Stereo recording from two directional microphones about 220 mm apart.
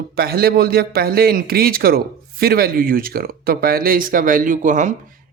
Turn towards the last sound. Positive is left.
turn(degrees=-35)  # may be behind; listen again after turning